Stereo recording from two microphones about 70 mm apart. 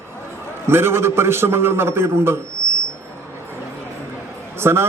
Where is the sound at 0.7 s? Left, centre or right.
Right.